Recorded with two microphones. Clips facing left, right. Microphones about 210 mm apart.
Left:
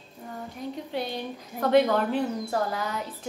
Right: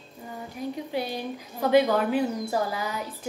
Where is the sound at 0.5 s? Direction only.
5° right (ahead or behind).